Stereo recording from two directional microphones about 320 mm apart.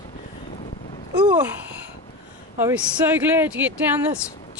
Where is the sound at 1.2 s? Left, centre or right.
Centre.